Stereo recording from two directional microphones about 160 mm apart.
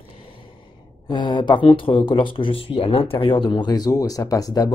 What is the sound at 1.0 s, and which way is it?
Speech, 30° left (ahead or behind).